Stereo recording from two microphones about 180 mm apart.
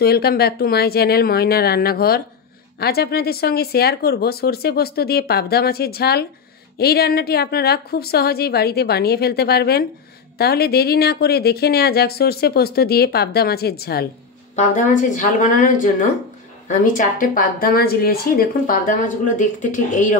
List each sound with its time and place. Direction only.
0.0 s speech: 60° left (ahead or behind)
14.5 s speech: 45° left (ahead or behind)